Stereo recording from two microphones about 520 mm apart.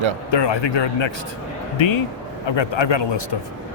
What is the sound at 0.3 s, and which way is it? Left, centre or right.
Speech, left.